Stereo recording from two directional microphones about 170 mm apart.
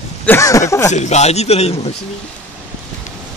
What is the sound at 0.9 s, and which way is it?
A man's voice, 40° left (ahead or behind).